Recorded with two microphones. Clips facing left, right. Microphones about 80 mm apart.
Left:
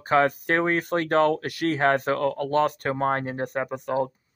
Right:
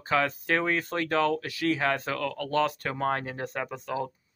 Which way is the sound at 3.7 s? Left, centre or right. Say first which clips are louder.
Left 6 dB; left.